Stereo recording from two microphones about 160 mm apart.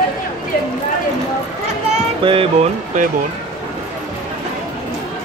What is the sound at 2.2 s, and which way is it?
Speech, 35° right (ahead or behind).